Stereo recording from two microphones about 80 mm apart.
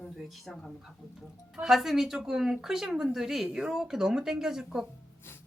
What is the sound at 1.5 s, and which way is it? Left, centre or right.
Speech, centre.